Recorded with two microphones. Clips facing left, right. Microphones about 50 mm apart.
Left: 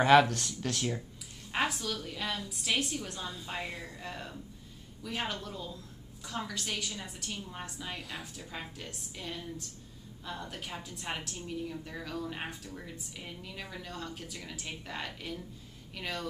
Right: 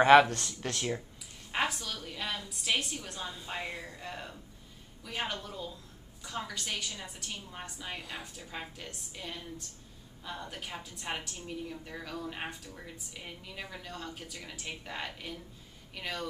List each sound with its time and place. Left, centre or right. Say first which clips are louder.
0.0 s speech: right 2 dB; centre
1.5 s a woman's voice: left 1 dB; centre